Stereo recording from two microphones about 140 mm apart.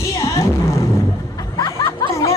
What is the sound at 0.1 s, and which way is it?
Music, 20° left (ahead or behind).